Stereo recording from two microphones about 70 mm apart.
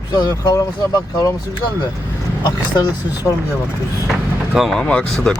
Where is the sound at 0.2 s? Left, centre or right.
Left.